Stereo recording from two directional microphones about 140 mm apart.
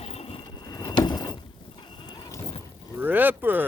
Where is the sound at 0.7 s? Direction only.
30° left (ahead or behind).